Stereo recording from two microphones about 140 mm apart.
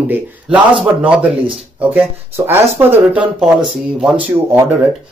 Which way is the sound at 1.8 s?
15° right (ahead or behind).